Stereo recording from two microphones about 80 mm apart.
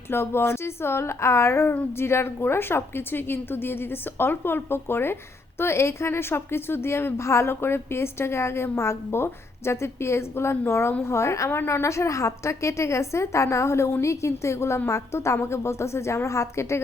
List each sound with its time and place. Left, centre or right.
0.1 s a woman's voice: left